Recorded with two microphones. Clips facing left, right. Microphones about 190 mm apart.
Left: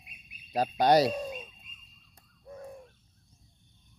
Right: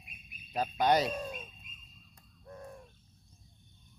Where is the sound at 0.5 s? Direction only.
35° left (ahead or behind).